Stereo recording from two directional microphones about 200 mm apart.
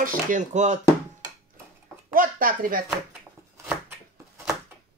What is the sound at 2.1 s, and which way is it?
Speech, 45° right (ahead or behind).